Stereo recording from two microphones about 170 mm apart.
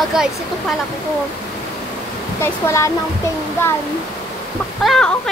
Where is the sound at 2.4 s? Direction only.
15° left (ahead or behind).